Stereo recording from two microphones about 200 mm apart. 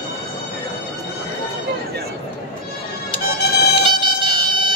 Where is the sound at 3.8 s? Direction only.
25° right (ahead or behind).